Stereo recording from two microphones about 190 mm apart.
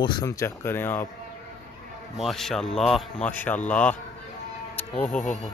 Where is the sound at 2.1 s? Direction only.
Centre (ahead or behind).